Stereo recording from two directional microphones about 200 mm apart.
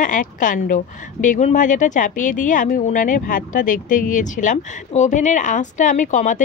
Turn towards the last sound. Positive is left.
turn(degrees=40)  # may be behind; listen again after turning